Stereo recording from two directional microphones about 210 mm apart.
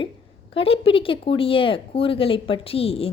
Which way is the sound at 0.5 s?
25° left (ahead or behind).